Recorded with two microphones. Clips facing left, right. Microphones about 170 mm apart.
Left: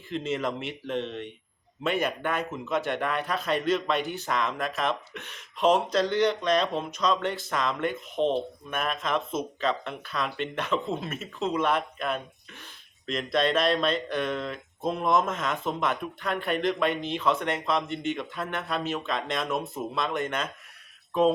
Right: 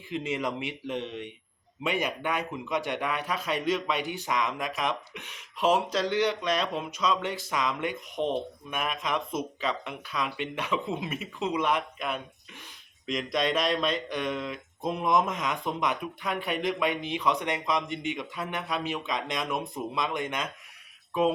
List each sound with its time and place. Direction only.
0.1 s speech: 10° right (ahead or behind)
8.2 s speech: 20° left (ahead or behind)
8.7 s speech: 15° right (ahead or behind)